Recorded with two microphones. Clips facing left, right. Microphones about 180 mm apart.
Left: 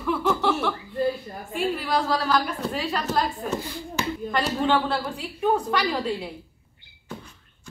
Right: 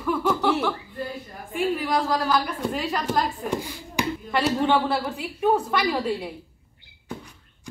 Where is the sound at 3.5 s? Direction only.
10° right (ahead or behind).